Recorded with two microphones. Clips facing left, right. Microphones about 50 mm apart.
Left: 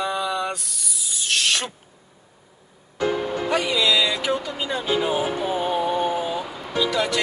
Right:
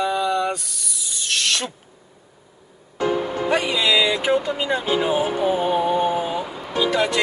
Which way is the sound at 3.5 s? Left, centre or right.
Right.